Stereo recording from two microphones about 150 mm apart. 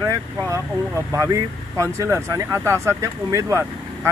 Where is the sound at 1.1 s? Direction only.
20° right (ahead or behind).